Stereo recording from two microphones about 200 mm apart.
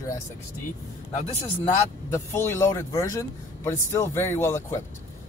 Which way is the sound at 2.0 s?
15° left (ahead or behind).